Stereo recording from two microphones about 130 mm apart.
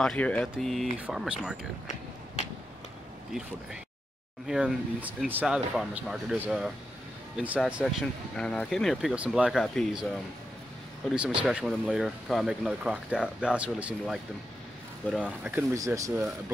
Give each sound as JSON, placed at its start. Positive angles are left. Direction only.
{"t": 0.0, "sound": "speech", "side_deg": 10}
{"t": 4.5, "sound": "speech", "side_deg": -5}
{"t": 8.0, "sound": "speech", "side_deg": 5}
{"t": 15.5, "sound": "speech", "side_deg": -20}